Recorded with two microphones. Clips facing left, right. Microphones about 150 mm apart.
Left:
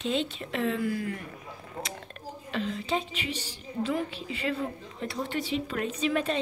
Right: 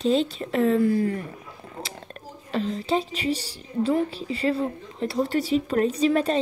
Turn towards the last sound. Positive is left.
turn(degrees=-35)  # may be behind; listen again after turning